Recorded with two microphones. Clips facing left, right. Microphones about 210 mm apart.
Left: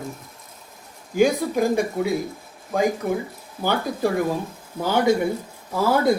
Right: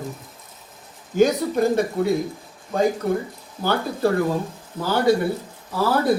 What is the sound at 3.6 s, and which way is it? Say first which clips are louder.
Speech: right 1 dB; 15° left (ahead or behind).